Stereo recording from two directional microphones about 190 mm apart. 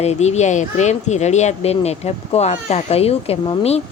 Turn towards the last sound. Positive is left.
turn(degrees=30)  # may be behind; listen again after turning